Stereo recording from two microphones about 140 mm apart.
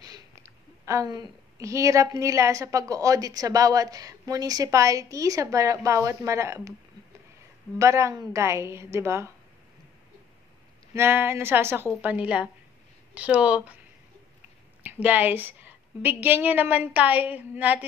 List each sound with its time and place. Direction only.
0.0 s a woman's voice: 25° right (ahead or behind)
7.8 s a woman's voice: 20° right (ahead or behind)
11.0 s a woman's voice: 15° right (ahead or behind)
14.8 s a woman's voice: 10° right (ahead or behind)